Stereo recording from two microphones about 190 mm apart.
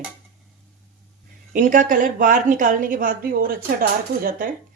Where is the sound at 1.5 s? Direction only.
45° right (ahead or behind).